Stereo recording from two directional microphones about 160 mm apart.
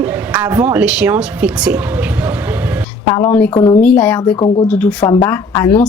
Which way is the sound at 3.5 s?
30° left (ahead or behind).